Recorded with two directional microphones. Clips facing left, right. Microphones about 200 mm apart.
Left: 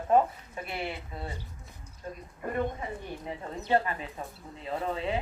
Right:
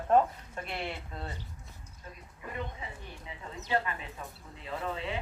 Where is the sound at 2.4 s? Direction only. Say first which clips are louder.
Left 8 dB; 50° left (ahead or behind).